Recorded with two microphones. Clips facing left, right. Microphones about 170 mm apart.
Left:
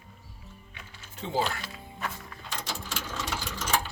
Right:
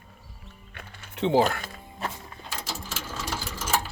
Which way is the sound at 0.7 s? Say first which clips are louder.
Right 7 dB; 70° right (ahead or behind).